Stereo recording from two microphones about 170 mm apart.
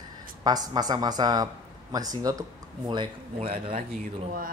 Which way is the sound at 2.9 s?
30° right (ahead or behind).